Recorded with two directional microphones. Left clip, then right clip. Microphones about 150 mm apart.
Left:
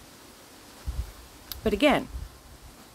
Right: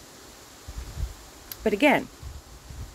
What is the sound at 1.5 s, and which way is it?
Speech, 15° left (ahead or behind).